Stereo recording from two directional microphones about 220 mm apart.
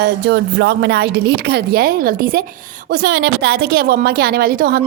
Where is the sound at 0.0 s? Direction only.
50° right (ahead or behind).